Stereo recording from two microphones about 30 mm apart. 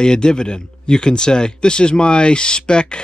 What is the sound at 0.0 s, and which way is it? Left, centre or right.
Speech, left.